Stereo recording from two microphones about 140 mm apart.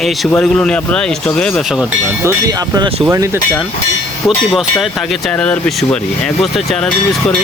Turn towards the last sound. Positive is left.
turn(degrees=0)  # may be behind; listen again after turning